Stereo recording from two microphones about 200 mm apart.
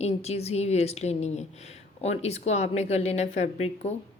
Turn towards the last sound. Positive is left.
turn(degrees=35)  # may be behind; listen again after turning